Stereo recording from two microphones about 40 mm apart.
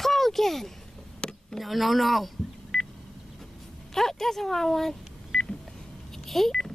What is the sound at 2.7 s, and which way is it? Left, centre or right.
Telephone dialing, centre.